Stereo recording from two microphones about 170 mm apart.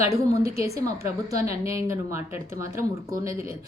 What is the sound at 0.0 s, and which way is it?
A woman's voice, 20° right (ahead or behind).